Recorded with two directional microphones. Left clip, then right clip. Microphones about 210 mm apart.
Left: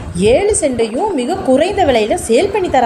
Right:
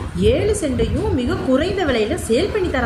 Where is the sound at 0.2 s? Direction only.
20° left (ahead or behind).